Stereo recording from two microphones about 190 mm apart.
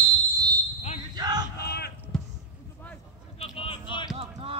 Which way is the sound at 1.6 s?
55° left (ahead or behind).